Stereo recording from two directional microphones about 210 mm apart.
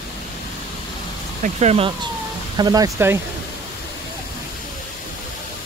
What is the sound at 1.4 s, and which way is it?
Speech, 30° right (ahead or behind).